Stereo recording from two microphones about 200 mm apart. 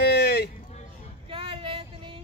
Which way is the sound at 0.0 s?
55° left (ahead or behind).